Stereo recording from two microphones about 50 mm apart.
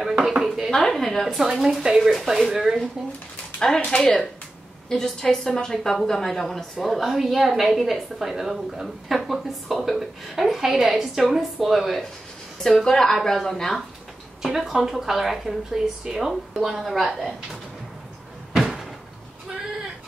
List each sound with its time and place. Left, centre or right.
0.1 s dishes: centre
0.7 s a sound: centre
0.9 s a woman's voice: centre
3.6 s a woman's voice: centre
3.9 s speech: left
4.8 s a woman's voice: centre
14.4 s a woman's voice: centre
18.5 s door: centre